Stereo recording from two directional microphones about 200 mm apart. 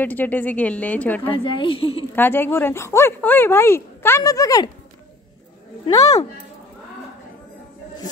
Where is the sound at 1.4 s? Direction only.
25° left (ahead or behind).